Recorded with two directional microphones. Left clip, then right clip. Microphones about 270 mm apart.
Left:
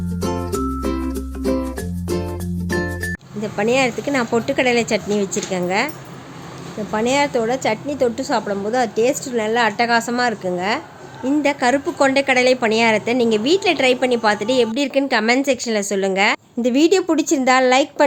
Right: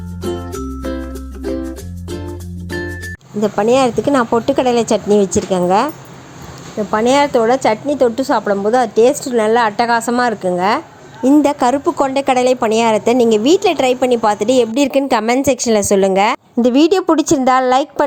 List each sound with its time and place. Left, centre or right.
3.4 s a woman's voice: right
6.9 s a woman's voice: centre